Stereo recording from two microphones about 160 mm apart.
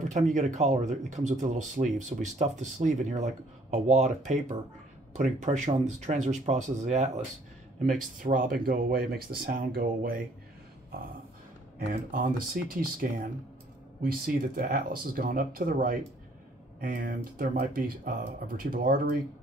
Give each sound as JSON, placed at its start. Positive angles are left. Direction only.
{"t": 0.1, "sound": "speech", "side_deg": -50}
{"t": 11.9, "sound": "speech", "side_deg": -55}
{"t": 12.6, "sound": "speech", "side_deg": -75}
{"t": 16.8, "sound": "speech", "side_deg": -80}